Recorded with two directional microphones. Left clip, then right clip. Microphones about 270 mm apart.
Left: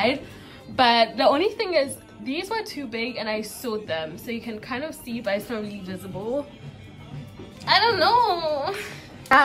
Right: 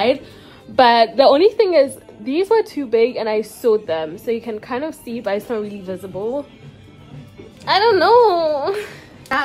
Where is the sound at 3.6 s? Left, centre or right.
Left.